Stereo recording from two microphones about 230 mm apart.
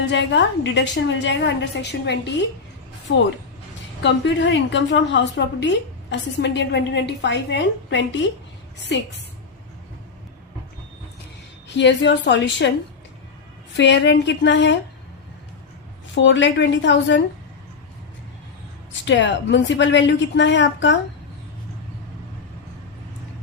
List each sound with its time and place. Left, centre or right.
0.1 s a woman's voice: left
4.0 s a woman's voice: left
11.8 s a woman's voice: left
13.7 s a woman's voice: left
16.1 s a woman's voice: left
19.0 s a woman's voice: left